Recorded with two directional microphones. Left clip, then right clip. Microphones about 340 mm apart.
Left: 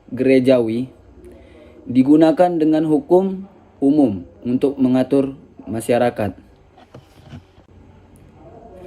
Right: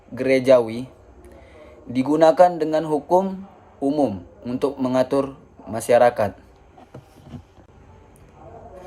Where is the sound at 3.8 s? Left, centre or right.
Right.